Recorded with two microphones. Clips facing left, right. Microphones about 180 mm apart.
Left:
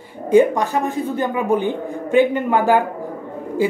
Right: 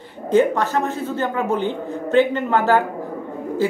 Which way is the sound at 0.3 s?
15° left (ahead or behind).